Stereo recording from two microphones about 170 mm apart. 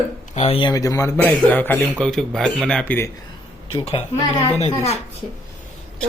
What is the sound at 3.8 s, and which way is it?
Speech, 40° left (ahead or behind).